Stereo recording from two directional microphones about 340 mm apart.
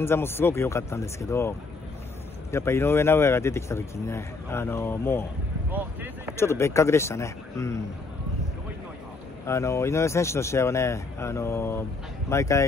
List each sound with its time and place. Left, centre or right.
0.0 s speech: centre
2.5 s speech: centre
5.7 s speech: centre
6.3 s speech: centre
9.5 s speech: centre